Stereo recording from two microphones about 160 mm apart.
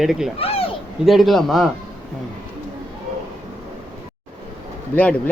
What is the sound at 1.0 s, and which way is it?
Speech, centre (ahead or behind).